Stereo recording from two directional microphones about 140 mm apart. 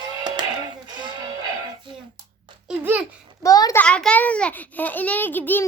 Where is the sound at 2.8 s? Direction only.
15° right (ahead or behind).